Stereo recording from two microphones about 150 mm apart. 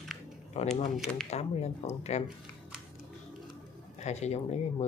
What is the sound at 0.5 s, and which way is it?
Speech, 45° left (ahead or behind).